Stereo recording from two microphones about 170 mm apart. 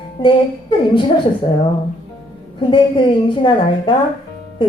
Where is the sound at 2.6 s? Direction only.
30° left (ahead or behind).